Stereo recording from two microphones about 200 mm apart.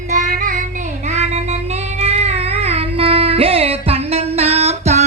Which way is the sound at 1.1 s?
35° right (ahead or behind).